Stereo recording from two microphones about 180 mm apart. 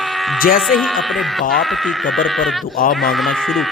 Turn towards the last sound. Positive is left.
turn(degrees=0)  # may be behind; listen again after turning